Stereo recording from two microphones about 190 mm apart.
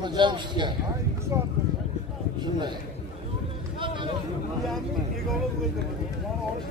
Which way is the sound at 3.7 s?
25° right (ahead or behind).